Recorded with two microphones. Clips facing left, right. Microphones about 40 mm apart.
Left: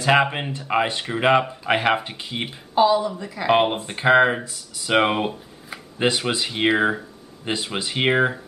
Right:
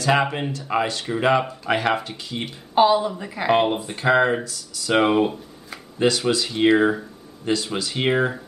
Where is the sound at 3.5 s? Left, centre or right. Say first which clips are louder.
Left 1 dB; centre.